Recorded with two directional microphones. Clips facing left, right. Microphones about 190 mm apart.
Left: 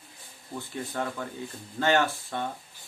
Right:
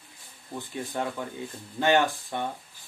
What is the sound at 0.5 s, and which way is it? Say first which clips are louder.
Speech: right 1 dB; 15° right (ahead or behind).